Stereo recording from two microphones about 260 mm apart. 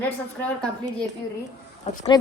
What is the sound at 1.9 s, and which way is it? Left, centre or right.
Speech, left.